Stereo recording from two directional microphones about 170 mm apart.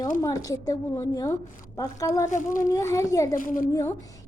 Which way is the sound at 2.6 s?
20° left (ahead or behind).